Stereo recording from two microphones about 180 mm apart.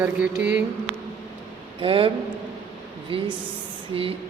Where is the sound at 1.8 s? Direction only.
30° right (ahead or behind).